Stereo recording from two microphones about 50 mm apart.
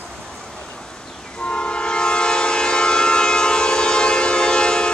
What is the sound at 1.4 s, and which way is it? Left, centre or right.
Train, centre.